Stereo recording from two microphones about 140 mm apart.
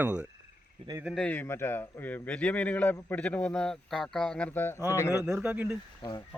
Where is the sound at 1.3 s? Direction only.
15° left (ahead or behind).